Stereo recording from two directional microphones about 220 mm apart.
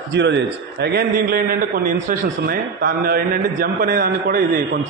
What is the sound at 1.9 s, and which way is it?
A man's voice, 40° right (ahead or behind).